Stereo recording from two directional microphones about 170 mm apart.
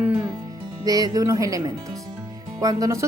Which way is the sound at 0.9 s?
20° right (ahead or behind).